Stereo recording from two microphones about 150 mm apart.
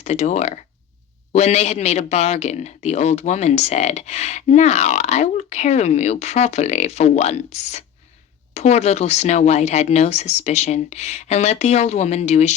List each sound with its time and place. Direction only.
0.0 s a man's voice: 45° left (ahead or behind)